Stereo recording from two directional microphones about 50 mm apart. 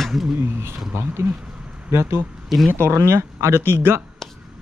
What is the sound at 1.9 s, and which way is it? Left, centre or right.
Speech, right.